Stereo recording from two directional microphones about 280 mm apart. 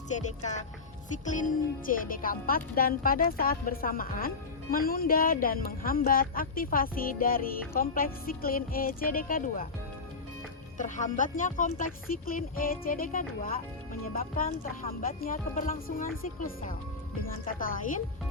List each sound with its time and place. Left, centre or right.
0.1 s speech: left
10.8 s speech: left